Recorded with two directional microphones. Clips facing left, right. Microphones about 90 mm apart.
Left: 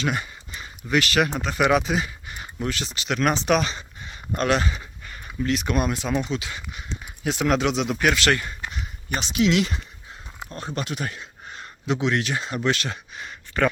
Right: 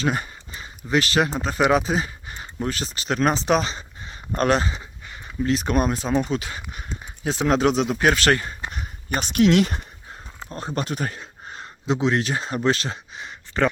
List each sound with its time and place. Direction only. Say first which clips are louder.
0.0 s a sound: right 2 dB; 35° right (ahead or behind)
0.9 s speech: right 1 dB; 30° right (ahead or behind)
4.8 s speech: even; 20° right (ahead or behind); by 7.0 s 45° right (ahead or behind)
7.0 s speech: right 1 dB; 30° right (ahead or behind)
7.9 s speech: right 2 dB; 30° right (ahead or behind)
8.7 s speech: right 3 dB; 40° right (ahead or behind)
10.5 s speech: right 3 dB; 35° right (ahead or behind)